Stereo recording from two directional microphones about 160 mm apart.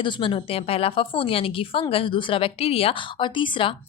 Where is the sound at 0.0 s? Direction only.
30° left (ahead or behind).